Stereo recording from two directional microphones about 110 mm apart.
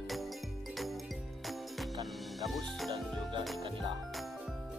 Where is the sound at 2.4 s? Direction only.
Centre (ahead or behind).